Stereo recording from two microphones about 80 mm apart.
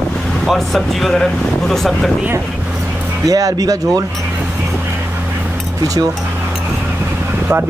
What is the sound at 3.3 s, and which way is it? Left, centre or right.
Speech, right.